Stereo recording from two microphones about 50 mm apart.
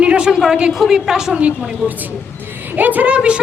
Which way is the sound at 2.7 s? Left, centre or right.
Right.